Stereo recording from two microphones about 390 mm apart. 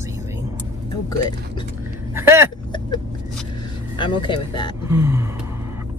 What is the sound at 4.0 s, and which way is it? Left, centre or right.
Speech, centre.